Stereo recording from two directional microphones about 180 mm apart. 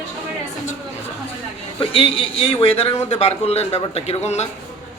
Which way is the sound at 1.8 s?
30° left (ahead or behind).